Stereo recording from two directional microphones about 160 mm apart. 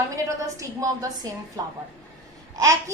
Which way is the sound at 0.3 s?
20° right (ahead or behind).